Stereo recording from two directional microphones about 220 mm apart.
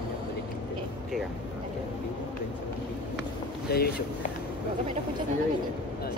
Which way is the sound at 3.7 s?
45° left (ahead or behind).